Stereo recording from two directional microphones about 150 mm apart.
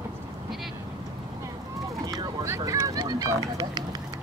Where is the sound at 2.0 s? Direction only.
25° right (ahead or behind).